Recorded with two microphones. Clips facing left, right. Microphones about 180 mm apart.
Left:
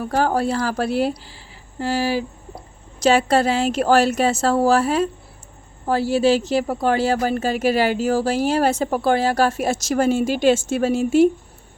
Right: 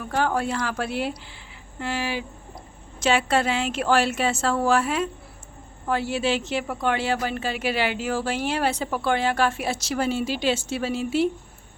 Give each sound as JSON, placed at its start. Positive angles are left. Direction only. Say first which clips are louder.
{"t": 0.0, "sound": "a woman's voice", "louder": "left 5 dB", "side_deg": 40}